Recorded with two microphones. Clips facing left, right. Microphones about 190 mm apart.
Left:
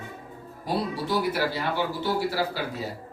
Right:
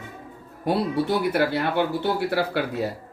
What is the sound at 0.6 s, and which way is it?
Speech, 60° right (ahead or behind).